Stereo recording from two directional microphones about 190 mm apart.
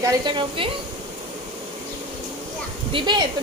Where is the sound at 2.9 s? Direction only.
25° right (ahead or behind).